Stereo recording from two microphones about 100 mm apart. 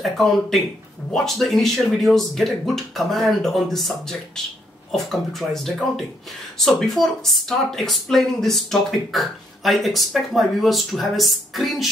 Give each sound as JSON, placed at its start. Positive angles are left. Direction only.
{"t": 0.0, "sound": "speech", "side_deg": 0}